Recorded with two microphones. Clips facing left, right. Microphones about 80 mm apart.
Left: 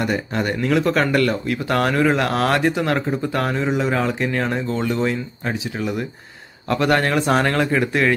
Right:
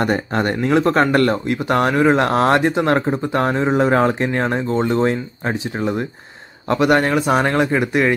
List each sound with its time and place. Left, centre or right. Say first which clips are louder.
0.0 s speech: right 3 dB; right
1.5 s speech: right 3 dB; right
6.7 s speech: right 3 dB; centre